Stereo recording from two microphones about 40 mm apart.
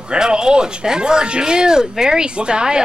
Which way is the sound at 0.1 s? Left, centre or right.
Right.